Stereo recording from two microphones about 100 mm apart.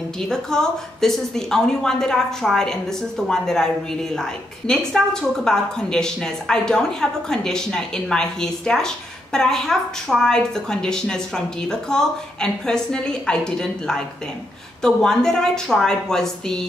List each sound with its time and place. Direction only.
0.2 s a woman's voice: 5° left (ahead or behind)